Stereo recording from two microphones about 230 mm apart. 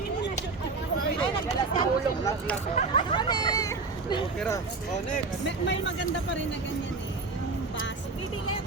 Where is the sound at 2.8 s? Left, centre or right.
Left.